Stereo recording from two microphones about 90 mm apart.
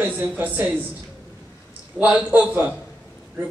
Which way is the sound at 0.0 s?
20° right (ahead or behind).